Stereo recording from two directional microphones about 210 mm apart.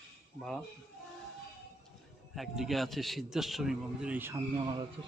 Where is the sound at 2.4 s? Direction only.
Centre (ahead or behind).